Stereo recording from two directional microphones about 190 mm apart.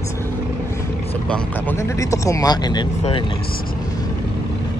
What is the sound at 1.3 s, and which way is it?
Speech, 10° left (ahead or behind).